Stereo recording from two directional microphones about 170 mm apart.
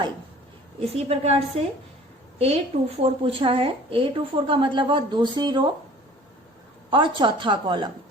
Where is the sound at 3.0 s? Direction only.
35° right (ahead or behind).